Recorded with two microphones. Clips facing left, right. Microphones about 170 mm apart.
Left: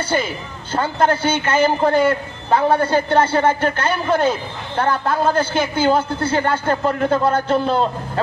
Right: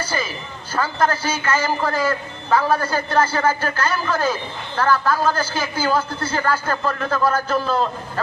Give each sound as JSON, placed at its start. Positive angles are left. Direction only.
{"t": 0.0, "sound": "a man's voice", "side_deg": 30}